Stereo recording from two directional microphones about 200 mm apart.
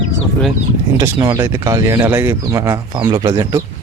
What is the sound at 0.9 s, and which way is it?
Speech, 15° right (ahead or behind).